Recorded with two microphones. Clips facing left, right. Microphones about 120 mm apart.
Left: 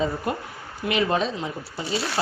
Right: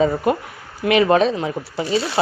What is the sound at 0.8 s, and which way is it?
A man's voice, 75° right (ahead or behind).